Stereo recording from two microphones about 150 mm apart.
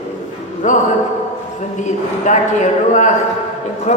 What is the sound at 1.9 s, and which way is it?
A woman's voice, 55° left (ahead or behind).